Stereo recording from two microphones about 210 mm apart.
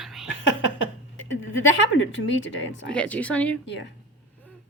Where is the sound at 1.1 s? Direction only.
65° left (ahead or behind).